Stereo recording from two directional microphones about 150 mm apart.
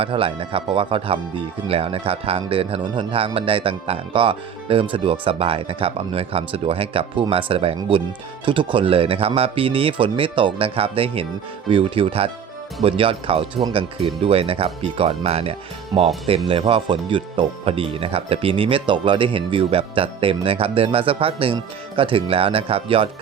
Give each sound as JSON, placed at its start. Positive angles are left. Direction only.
{"t": 0.0, "sound": "speech", "side_deg": -35}